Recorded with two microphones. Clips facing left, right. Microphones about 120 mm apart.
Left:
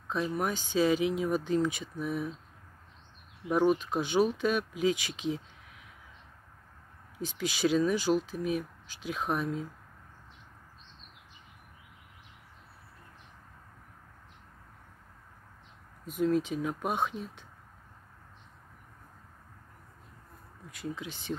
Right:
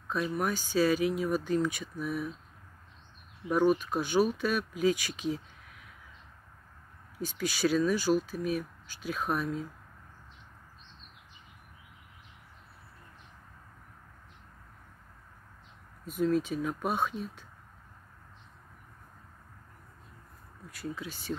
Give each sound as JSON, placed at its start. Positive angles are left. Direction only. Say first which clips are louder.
{"t": 0.1, "sound": "speech", "louder": "even", "side_deg": 20}
{"t": 3.4, "sound": "speech", "louder": "even", "side_deg": 20}
{"t": 7.2, "sound": "speech", "louder": "even", "side_deg": 20}
{"t": 16.1, "sound": "speech", "louder": "even", "side_deg": 15}
{"t": 20.7, "sound": "speech", "louder": "even", "side_deg": 20}